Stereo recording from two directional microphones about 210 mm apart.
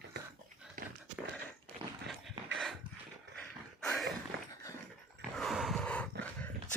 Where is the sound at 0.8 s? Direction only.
40° right (ahead or behind).